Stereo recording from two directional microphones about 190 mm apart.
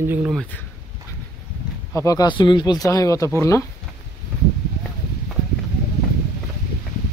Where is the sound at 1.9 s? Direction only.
15° left (ahead or behind).